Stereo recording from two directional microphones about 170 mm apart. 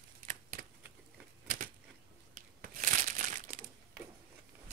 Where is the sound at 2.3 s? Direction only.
50° right (ahead or behind).